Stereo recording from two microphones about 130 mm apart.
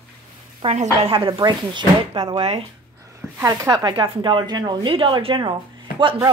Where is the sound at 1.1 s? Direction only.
40° right (ahead or behind).